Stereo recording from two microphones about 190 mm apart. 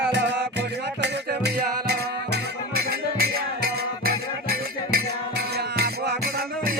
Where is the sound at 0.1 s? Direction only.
65° right (ahead or behind).